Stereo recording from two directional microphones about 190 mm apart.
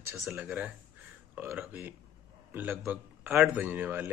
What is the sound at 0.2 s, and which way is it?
A man's voice, 5° right (ahead or behind).